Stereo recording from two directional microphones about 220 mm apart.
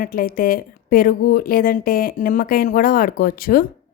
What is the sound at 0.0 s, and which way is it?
A woman's voice, 40° left (ahead or behind).